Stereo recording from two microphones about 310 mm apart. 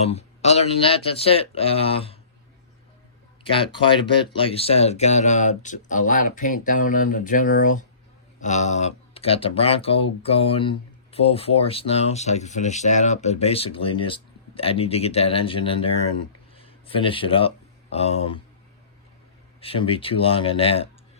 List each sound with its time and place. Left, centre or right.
0.0 s speech: centre
3.4 s speech: centre
19.5 s speech: centre